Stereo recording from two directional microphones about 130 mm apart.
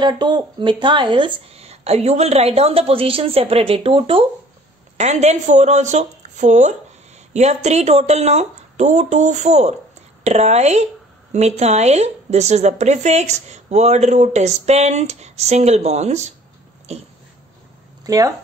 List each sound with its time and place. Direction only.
0.0 s speech: 35° right (ahead or behind)
1.5 s a woman's voice: 55° right (ahead or behind)
4.9 s a woman's voice: 60° right (ahead or behind)
18.0 s speech: 25° right (ahead or behind)